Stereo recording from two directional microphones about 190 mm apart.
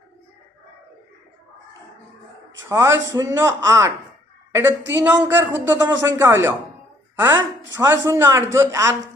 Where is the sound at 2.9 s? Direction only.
75° right (ahead or behind).